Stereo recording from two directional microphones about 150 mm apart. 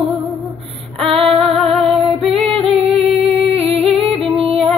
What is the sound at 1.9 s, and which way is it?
Female singing, 40° right (ahead or behind).